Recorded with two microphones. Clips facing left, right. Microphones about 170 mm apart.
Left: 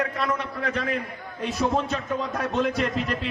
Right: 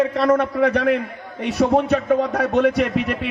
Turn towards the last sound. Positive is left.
turn(degrees=-65)  # may be behind; listen again after turning